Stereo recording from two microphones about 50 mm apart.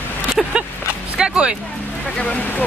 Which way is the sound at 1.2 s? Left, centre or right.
Centre.